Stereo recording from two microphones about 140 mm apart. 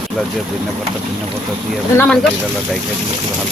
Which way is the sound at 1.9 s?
5° left (ahead or behind).